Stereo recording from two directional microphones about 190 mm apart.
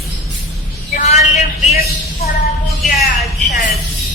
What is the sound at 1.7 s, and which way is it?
Speech, 55° left (ahead or behind).